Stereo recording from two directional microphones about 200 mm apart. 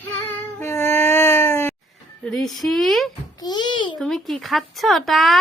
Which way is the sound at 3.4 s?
20° left (ahead or behind).